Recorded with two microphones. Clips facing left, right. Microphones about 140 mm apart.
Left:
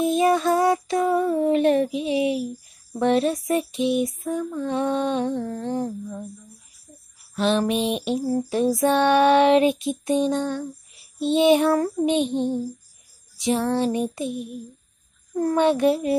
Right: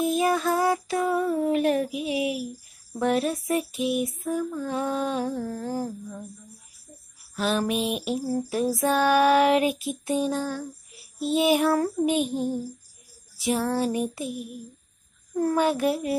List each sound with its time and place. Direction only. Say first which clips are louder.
0.0 s female singing: left 4 dB; centre (ahead or behind)
7.3 s female singing: left 4 dB; 5° right (ahead or behind)
13.4 s female singing: left 3 dB; 5° right (ahead or behind)
14.3 s a sound: left 4 dB; 30° left (ahead or behind)
15.3 s female singing: left 3 dB; 5° right (ahead or behind)